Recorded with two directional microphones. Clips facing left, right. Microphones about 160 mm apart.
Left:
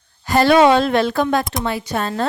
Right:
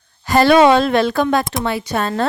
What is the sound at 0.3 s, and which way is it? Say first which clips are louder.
Speech: right 2 dB; 85° right.